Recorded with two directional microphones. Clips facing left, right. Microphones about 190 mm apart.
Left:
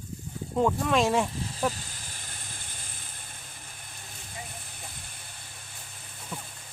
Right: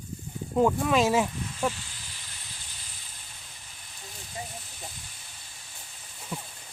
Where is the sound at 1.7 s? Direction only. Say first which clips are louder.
Even; 45° left (ahead or behind).